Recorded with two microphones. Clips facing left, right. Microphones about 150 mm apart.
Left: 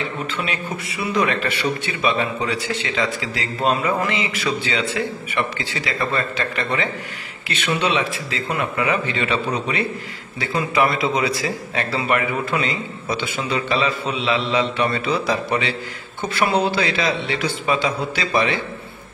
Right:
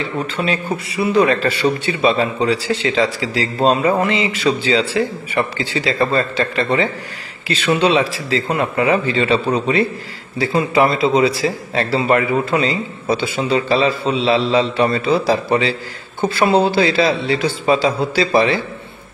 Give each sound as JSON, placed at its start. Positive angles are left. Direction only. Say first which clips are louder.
{"t": 0.4, "sound": "a man's voice", "louder": "right 6 dB", "side_deg": -30}